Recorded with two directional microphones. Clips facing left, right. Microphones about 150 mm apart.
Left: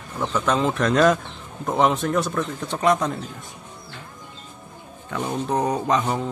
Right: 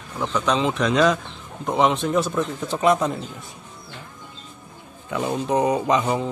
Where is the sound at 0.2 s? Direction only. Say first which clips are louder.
Even; 5° left (ahead or behind).